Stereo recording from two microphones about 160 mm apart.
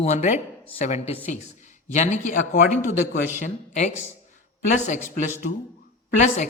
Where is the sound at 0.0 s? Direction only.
45° left (ahead or behind).